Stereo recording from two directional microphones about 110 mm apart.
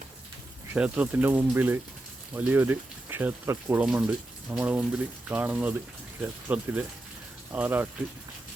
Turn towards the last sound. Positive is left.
turn(degrees=-15)  # may be behind; listen again after turning